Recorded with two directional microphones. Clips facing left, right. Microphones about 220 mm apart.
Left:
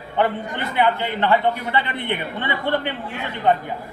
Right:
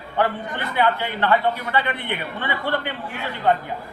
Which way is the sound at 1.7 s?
25° left (ahead or behind).